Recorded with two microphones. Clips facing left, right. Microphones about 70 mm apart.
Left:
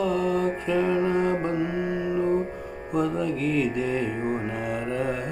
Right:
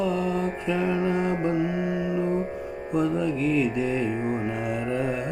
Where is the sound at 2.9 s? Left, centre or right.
Left.